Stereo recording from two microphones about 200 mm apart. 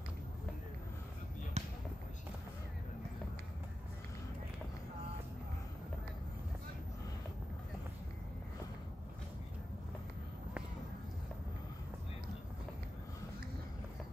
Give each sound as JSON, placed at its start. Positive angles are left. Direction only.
{"t": 1.6, "sound": "basketball bounce", "side_deg": -30}